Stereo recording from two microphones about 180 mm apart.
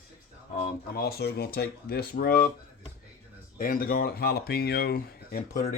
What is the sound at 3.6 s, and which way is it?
Speech, 55° left (ahead or behind).